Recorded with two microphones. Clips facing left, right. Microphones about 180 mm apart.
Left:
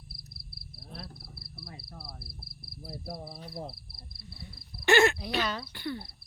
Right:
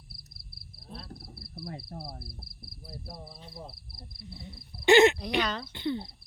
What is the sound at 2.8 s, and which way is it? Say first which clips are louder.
Speech: left 4 dB; 65° left (ahead or behind).